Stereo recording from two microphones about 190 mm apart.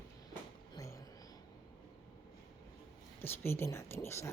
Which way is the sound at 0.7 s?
15° left (ahead or behind).